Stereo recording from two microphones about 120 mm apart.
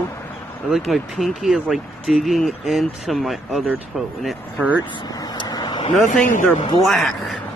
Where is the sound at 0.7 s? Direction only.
Centre (ahead or behind).